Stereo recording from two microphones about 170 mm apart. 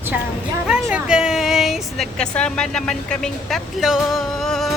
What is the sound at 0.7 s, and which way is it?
Speech, 5° right (ahead or behind).